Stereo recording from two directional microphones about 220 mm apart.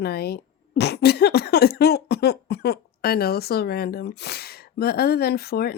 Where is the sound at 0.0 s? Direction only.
45° left (ahead or behind).